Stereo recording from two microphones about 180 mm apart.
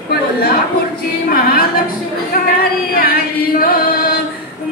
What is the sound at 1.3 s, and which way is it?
Music, 55° left (ahead or behind).